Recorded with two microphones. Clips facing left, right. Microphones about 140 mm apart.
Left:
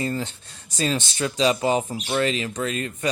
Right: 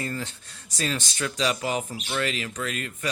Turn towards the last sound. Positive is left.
turn(degrees=30)  # may be behind; listen again after turning